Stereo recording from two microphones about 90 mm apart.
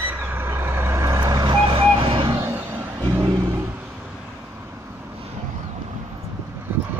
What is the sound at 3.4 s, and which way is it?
Vehicle, 30° right (ahead or behind).